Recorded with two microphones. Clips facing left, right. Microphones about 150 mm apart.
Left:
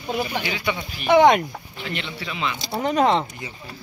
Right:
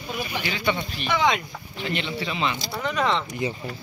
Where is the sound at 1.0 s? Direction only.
55° left (ahead or behind).